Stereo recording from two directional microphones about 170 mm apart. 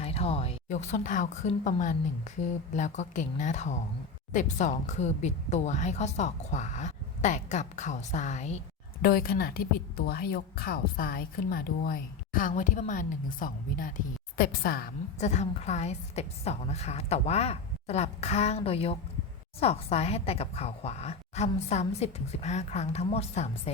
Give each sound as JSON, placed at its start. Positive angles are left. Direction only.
{"t": 0.0, "sound": "a woman's voice", "side_deg": 35}
{"t": 9.0, "sound": "a woman's voice", "side_deg": 60}
{"t": 15.2, "sound": "a woman's voice", "side_deg": 45}